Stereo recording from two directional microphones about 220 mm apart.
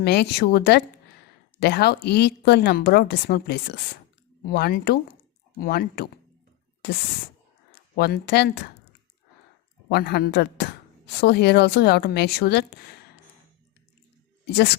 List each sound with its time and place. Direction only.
0.0 s speech: 50° left (ahead or behind)
7.9 s speech: 45° left (ahead or behind)
9.9 s speech: 45° left (ahead or behind)
14.4 s speech: 50° left (ahead or behind)